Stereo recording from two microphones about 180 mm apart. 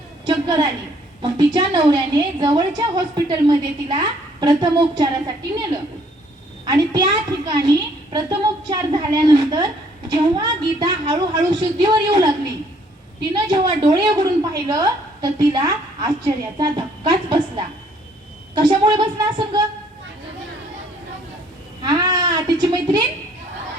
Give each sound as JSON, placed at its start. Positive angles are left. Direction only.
{"t": 0.3, "sound": "a sound", "side_deg": -25}
{"t": 1.2, "sound": "a woman's voice", "side_deg": -25}
{"t": 6.7, "sound": "a woman's voice", "side_deg": -20}
{"t": 13.3, "sound": "a woman's voice", "side_deg": -25}
{"t": 18.5, "sound": "a woman's voice", "side_deg": -25}
{"t": 21.8, "sound": "a sound", "side_deg": -20}